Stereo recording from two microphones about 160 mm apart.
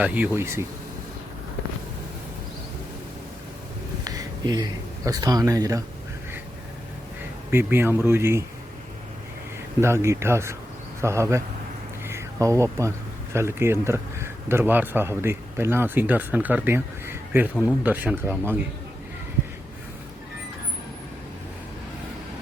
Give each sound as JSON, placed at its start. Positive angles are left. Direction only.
{"t": 0.0, "sound": "speech", "side_deg": -10}
{"t": 4.0, "sound": "speech", "side_deg": -25}
{"t": 7.5, "sound": "speech", "side_deg": -15}
{"t": 9.8, "sound": "speech", "side_deg": -15}
{"t": 12.0, "sound": "a sound", "side_deg": -20}
{"t": 13.3, "sound": "speech", "side_deg": -15}